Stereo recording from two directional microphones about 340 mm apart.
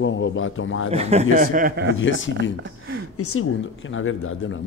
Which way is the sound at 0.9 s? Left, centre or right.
Centre.